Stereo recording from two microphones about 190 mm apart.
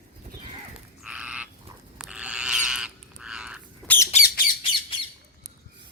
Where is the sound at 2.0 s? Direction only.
5° right (ahead or behind).